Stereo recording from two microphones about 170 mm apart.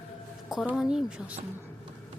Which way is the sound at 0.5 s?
Centre (ahead or behind).